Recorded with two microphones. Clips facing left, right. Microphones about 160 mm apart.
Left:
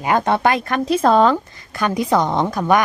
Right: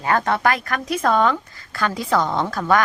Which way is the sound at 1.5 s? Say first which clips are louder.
Left 3 dB; 20° left (ahead or behind).